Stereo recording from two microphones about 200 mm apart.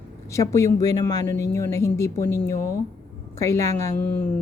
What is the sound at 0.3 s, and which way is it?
Speech, 15° left (ahead or behind).